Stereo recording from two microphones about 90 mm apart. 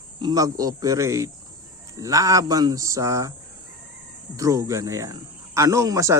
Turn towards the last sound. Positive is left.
turn(degrees=-35)  # may be behind; listen again after turning